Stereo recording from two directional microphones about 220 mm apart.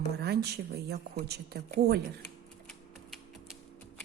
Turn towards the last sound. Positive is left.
turn(degrees=0)  # may be behind; listen again after turning